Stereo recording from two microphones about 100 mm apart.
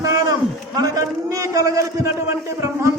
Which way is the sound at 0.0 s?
35° right (ahead or behind).